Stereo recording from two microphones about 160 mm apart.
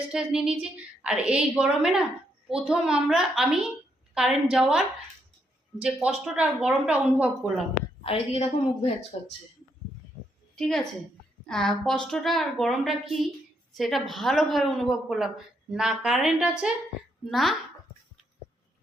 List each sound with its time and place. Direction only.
0.1 s a woman's voice: 5° right (ahead or behind)
6.2 s a woman's voice: 5° right (ahead or behind)
8.0 s a woman's voice: 40° left (ahead or behind)
10.5 s a woman's voice: centre (ahead or behind)